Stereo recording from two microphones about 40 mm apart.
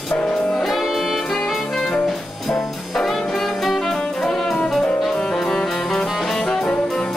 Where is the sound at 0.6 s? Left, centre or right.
Centre.